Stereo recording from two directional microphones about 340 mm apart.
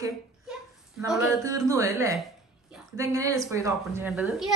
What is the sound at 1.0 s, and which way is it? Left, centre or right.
A woman's voice, centre.